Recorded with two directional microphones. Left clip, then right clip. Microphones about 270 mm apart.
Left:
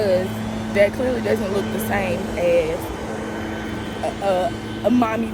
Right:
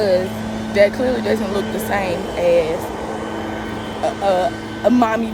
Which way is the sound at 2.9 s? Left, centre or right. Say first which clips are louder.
Right 3 dB; right.